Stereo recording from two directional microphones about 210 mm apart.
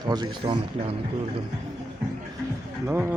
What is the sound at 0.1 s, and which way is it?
Speech, 20° right (ahead or behind).